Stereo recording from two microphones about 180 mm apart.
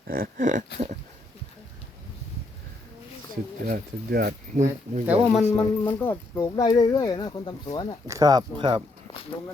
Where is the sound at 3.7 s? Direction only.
60° right (ahead or behind).